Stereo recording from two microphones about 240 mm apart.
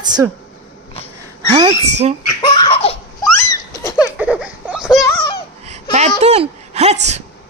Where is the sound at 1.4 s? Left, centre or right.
Right.